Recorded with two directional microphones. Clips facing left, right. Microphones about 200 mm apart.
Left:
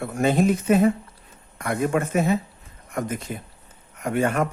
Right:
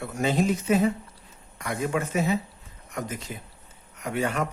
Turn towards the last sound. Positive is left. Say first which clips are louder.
# left 5 dB
turn(degrees=50)  # may be behind; listen again after turning